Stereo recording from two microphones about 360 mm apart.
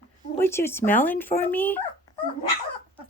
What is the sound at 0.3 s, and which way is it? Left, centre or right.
Speech, centre.